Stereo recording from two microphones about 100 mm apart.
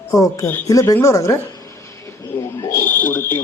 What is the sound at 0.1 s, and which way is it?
Speech, 30° left (ahead or behind).